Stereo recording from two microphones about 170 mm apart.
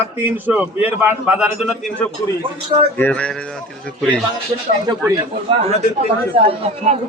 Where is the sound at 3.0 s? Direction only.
10° left (ahead or behind).